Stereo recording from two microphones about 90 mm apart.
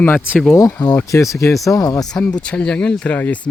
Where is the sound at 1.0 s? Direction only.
35° left (ahead or behind).